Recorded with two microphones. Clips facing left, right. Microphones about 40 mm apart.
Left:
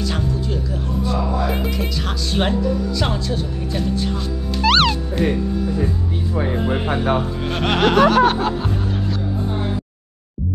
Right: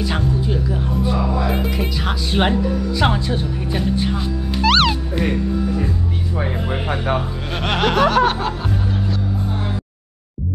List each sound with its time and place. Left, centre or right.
0.0 s music: centre
1.7 s speech: centre
4.6 s music: centre
7.5 s music: centre